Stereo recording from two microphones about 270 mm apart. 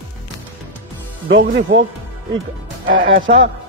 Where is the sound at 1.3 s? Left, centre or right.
Right.